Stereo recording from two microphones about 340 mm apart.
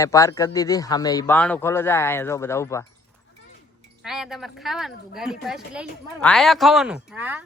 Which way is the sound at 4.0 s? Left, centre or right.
Centre.